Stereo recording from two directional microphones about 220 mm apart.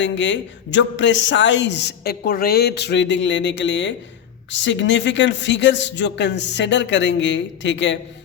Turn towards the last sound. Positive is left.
turn(degrees=55)  # may be behind; listen again after turning